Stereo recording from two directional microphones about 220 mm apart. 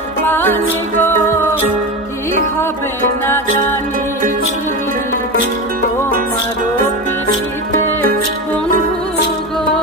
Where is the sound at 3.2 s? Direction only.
10° left (ahead or behind).